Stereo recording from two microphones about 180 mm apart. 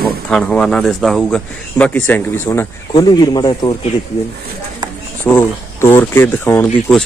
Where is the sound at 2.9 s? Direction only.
25° left (ahead or behind).